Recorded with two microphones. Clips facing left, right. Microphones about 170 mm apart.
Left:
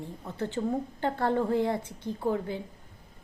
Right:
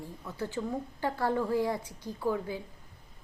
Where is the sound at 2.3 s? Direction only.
55° left (ahead or behind).